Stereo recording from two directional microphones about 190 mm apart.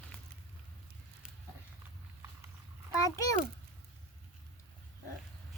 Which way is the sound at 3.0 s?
15° left (ahead or behind).